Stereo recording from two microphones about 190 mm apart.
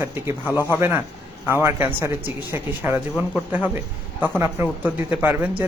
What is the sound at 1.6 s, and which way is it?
Speech, 15° right (ahead or behind).